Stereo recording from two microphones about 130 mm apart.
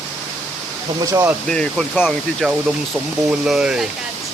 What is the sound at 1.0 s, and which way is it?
Speech, 25° right (ahead or behind).